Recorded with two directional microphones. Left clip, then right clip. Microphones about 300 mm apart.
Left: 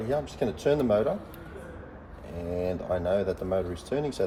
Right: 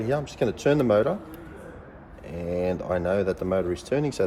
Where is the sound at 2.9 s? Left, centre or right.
Centre.